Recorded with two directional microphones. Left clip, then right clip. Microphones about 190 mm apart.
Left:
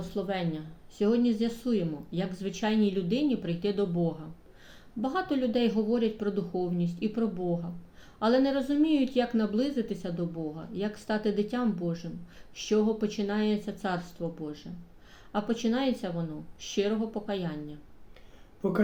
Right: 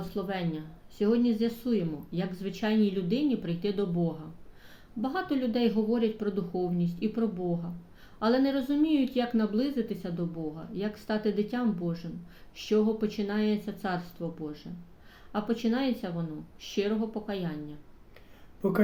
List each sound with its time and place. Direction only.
0.0 s speech: 10° left (ahead or behind)
18.6 s speech: 20° right (ahead or behind)